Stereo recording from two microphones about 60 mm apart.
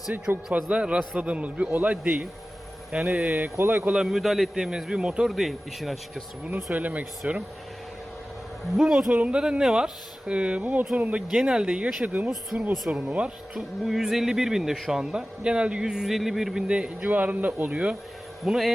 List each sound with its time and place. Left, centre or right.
0.5 s a man's voice: centre
3.6 s speech: right
3.9 s a man's voice: centre
5.3 s speech: centre
6.7 s a man's voice: right
8.8 s a man's voice: centre; by 11.2 s right
11.3 s a man's voice: centre
12.0 s a man's voice: right
12.5 s speech: centre
13.1 s a man's voice: centre
17.0 s a man's voice: right
18.4 s speech: centre